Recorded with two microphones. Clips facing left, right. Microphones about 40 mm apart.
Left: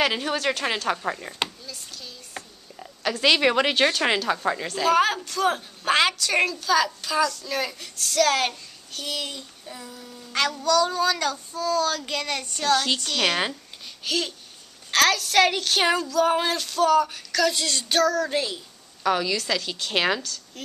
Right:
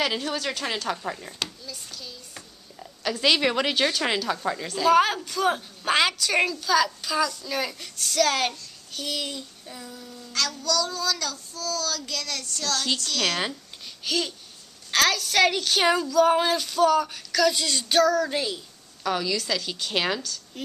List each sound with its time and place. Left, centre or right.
0.0 s a woman's voice: left
1.7 s hands: centre
2.3 s speech: centre
4.8 s a woman's voice: centre
10.3 s child singing: left
12.8 s a woman's voice: left
14.0 s a woman's voice: centre
19.0 s a woman's voice: centre
20.5 s speech: centre